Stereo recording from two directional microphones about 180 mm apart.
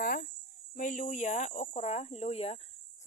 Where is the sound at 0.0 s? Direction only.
55° left (ahead or behind).